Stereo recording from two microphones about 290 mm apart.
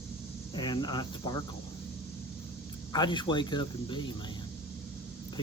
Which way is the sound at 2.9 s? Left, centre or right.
Centre.